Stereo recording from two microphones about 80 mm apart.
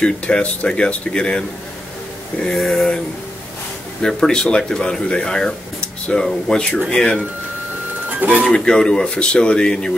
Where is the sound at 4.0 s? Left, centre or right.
Centre.